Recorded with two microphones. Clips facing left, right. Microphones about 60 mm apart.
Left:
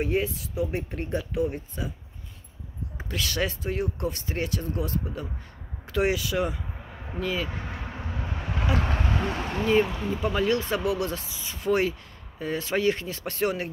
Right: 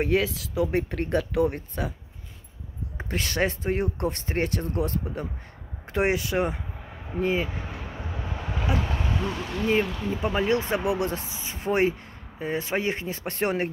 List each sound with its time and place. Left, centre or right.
0.0 s speech: right
3.0 s speech: right
8.7 s speech: left
10.2 s speech: right